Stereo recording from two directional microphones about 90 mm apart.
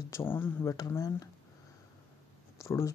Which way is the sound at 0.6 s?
40° left (ahead or behind).